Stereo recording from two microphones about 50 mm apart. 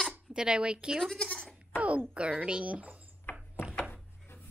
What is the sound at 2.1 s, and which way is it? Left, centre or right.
Speech, right.